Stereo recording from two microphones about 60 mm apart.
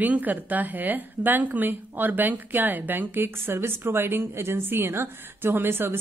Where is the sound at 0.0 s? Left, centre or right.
Right.